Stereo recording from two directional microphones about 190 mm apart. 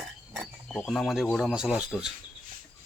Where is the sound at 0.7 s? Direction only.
5° left (ahead or behind).